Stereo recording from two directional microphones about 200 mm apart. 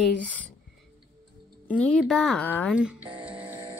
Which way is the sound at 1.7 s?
5° left (ahead or behind).